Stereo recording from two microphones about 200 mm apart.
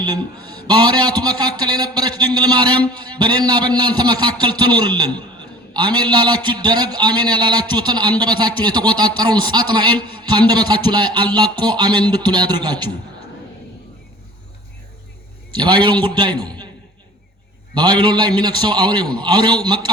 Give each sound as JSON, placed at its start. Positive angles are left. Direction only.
{"t": 0.0, "sound": "a man's voice", "side_deg": -20}
{"t": 15.5, "sound": "a man's voice", "side_deg": -25}
{"t": 17.7, "sound": "a man's voice", "side_deg": -25}